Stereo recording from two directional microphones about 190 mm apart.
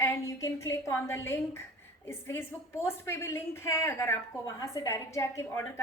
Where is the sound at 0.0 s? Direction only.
15° left (ahead or behind).